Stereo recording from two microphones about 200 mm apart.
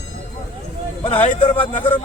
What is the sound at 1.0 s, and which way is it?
Speech, 25° left (ahead or behind).